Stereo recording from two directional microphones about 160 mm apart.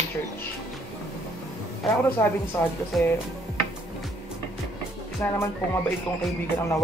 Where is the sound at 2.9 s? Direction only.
Centre (ahead or behind).